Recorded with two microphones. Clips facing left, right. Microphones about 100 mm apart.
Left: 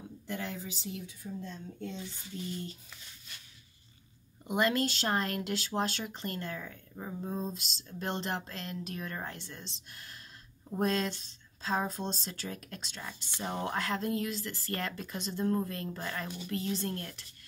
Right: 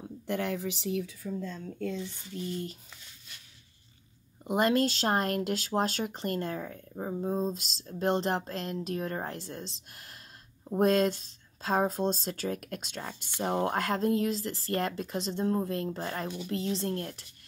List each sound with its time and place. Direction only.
0.3 s speech: 65° right (ahead or behind)
1.6 s speech: 90° right
2.3 s speech: 40° right (ahead or behind)
4.5 s speech: 40° right (ahead or behind)